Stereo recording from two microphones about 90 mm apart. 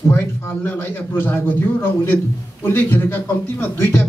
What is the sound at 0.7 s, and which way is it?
A man's voice, 25° left (ahead or behind).